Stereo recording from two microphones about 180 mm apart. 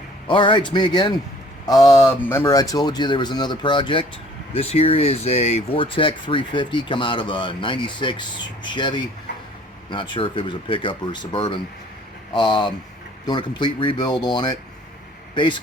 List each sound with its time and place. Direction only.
0.3 s speech: 30° left (ahead or behind)